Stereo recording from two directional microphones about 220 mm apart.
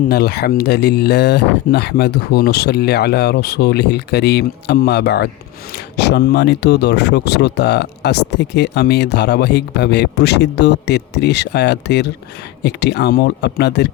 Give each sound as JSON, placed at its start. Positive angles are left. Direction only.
{"t": 0.1, "sound": "speech", "side_deg": 45}